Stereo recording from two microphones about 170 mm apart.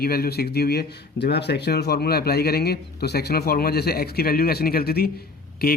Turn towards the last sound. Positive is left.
turn(degrees=65)  # may be behind; listen again after turning